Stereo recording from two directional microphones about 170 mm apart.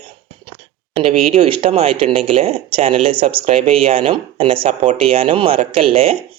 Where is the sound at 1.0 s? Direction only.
35° right (ahead or behind).